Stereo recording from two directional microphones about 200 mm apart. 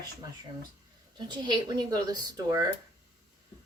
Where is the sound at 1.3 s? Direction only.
20° right (ahead or behind).